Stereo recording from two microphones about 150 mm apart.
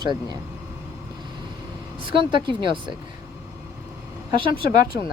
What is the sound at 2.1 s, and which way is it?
Speech, 35° right (ahead or behind).